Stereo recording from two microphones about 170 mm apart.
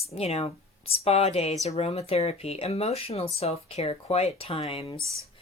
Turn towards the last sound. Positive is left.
turn(degrees=35)  # may be behind; listen again after turning